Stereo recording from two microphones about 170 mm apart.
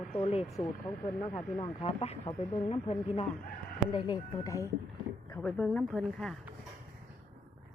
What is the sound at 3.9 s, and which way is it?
Speech, 25° left (ahead or behind).